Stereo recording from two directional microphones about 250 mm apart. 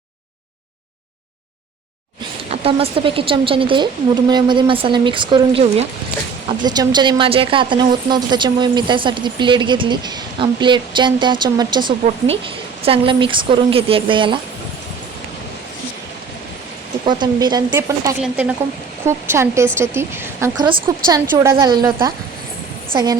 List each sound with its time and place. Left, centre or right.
2.5 s a woman's voice: right
17.1 s speech: centre